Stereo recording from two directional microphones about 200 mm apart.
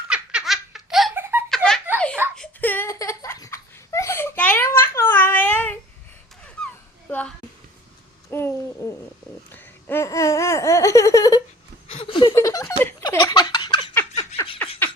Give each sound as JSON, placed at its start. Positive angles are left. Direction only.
{"t": 0.1, "sound": "baby laughter", "side_deg": -5}
{"t": 1.2, "sound": "giggle", "side_deg": -10}
{"t": 1.5, "sound": "giggle", "side_deg": 0}
{"t": 2.3, "sound": "a sound", "side_deg": 5}
{"t": 8.3, "sound": "babbling", "side_deg": 10}
{"t": 9.5, "sound": "laughter", "side_deg": 10}
{"t": 11.9, "sound": "a sound", "side_deg": 25}
{"t": 12.3, "sound": "giggle", "side_deg": 15}
{"t": 14.6, "sound": "a sound", "side_deg": 10}